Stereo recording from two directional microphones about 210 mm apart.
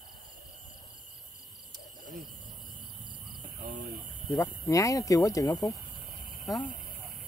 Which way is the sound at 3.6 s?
45° right (ahead or behind).